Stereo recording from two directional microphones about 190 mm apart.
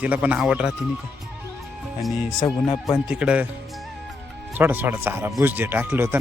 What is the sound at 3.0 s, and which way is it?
Speech, 5° right (ahead or behind).